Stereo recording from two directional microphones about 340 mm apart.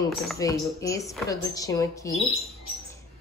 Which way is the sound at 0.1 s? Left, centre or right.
Centre.